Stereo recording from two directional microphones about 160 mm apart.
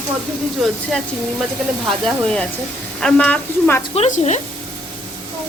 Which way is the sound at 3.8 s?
45° left (ahead or behind).